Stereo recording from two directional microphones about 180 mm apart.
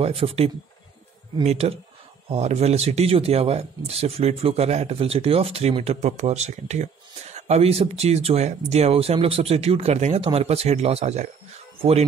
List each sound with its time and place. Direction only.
0.0 s speech: 30° right (ahead or behind)